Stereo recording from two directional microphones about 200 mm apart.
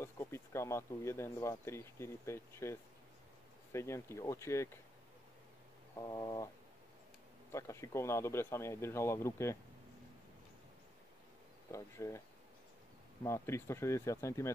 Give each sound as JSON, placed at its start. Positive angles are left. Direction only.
{"t": 0.0, "sound": "speech", "side_deg": 15}
{"t": 5.9, "sound": "speech", "side_deg": 15}
{"t": 7.5, "sound": "speech", "side_deg": 15}
{"t": 11.7, "sound": "speech", "side_deg": 15}
{"t": 13.2, "sound": "speech", "side_deg": 15}